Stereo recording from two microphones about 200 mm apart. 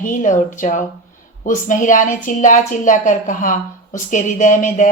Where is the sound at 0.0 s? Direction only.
40° left (ahead or behind).